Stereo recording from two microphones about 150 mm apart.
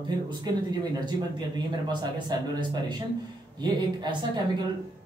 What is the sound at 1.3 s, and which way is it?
Speech, 30° right (ahead or behind).